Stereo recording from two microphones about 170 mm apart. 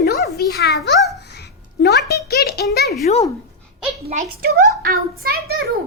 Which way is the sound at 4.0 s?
40° right (ahead or behind).